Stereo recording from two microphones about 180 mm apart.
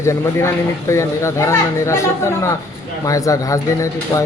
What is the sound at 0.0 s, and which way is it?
Speech, 15° left (ahead or behind).